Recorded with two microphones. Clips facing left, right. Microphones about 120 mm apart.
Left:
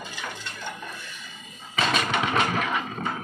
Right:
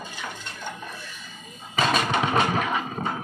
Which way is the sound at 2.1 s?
30° right (ahead or behind).